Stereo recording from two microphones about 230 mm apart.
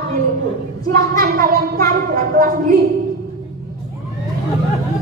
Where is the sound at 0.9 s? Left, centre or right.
Right.